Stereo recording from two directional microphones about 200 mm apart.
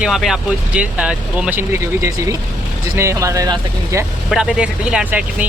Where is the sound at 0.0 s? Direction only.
Centre (ahead or behind); by 4.0 s 20° right (ahead or behind).